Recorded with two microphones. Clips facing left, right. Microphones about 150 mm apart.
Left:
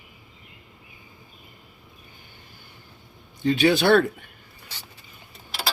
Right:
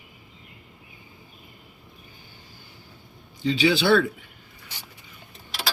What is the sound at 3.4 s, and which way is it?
Speech, 50° left (ahead or behind).